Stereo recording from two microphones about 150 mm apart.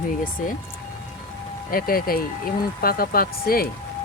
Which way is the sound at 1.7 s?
75° left (ahead or behind).